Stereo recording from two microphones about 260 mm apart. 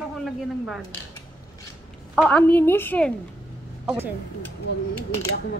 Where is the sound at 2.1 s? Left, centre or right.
Centre.